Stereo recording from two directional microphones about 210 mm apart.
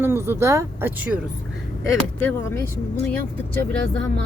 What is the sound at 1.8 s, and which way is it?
Speech, 5° left (ahead or behind).